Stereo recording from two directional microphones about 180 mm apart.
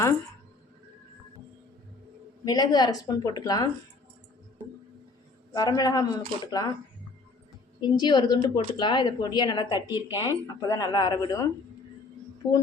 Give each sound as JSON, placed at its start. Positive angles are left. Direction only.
{"t": 2.4, "sound": "a woman's voice", "side_deg": 20}
{"t": 5.5, "sound": "a woman's voice", "side_deg": 20}
{"t": 7.8, "sound": "a woman's voice", "side_deg": 25}
{"t": 12.4, "sound": "speech", "side_deg": 15}